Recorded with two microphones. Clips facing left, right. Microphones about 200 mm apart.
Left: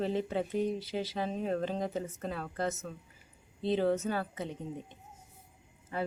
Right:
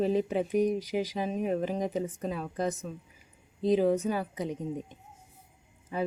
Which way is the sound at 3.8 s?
10° right (ahead or behind).